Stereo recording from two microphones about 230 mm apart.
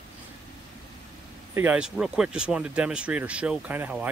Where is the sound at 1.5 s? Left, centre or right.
Centre.